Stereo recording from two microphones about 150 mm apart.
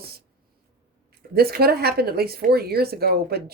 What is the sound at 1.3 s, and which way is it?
Speech, 90° right.